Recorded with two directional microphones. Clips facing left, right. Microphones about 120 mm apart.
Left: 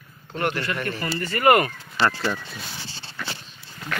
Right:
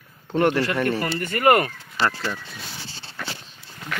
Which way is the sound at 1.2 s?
50° right (ahead or behind).